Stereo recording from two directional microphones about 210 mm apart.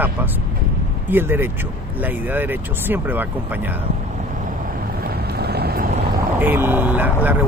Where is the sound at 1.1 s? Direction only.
10° right (ahead or behind).